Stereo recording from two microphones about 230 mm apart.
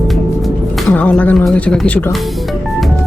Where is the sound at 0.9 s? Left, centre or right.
Centre.